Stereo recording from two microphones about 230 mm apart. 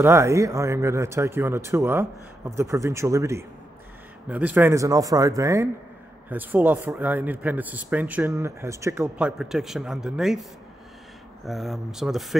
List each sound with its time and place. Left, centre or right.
0.0 s a man's voice: centre
11.4 s speech: centre